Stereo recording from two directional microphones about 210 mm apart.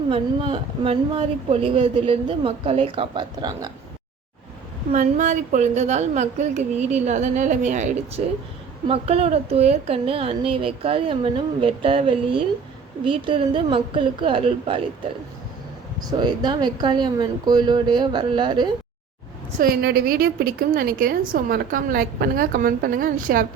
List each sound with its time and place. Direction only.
0.1 s speech: 25° right (ahead or behind)
4.9 s a woman's voice: 35° right (ahead or behind)
16.0 s speech: 20° right (ahead or behind)
19.5 s a woman's voice: 45° right (ahead or behind)